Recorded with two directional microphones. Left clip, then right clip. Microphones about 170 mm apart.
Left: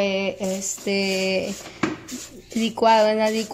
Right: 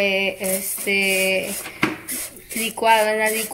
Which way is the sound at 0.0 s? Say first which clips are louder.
Right 3 dB; 10° left (ahead or behind).